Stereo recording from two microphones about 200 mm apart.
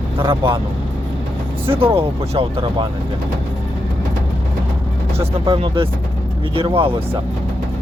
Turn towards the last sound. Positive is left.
turn(degrees=-30)  # may be behind; listen again after turning